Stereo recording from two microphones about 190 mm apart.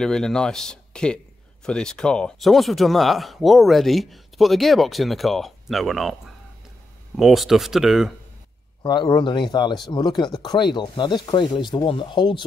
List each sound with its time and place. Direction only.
0.0 s a man's voice: 5° left (ahead or behind)
7.2 s a man's voice: centre (ahead or behind)
8.8 s speech: 25° left (ahead or behind)